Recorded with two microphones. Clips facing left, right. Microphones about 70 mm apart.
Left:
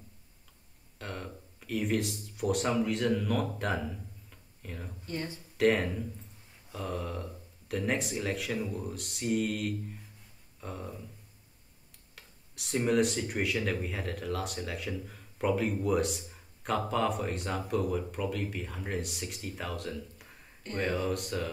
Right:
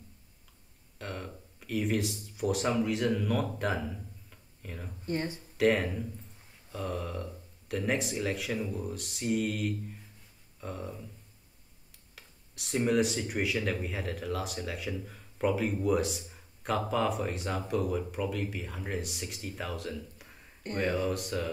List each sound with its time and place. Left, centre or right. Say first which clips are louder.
0.9 s speech: right 1 dB; centre
5.0 s speech: right 5 dB; right
5.6 s speech: even; centre
12.2 s speech: even; centre